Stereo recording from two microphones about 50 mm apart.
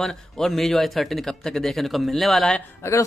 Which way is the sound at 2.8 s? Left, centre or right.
Left.